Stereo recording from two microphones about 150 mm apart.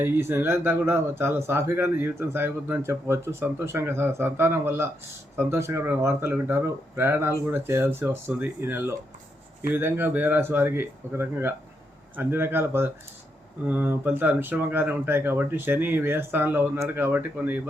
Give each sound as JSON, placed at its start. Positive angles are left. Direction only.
{"t": 0.0, "sound": "speech", "side_deg": -15}